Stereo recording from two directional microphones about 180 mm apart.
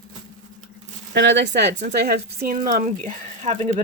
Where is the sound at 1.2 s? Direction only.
80° right; by 2.3 s 65° right (ahead or behind).